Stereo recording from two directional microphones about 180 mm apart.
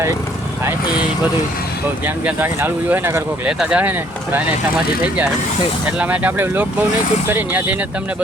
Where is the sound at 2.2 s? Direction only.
10° right (ahead or behind).